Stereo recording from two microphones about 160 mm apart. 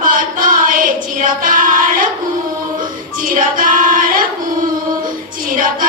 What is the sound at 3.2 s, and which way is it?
Choir, 60° right (ahead or behind).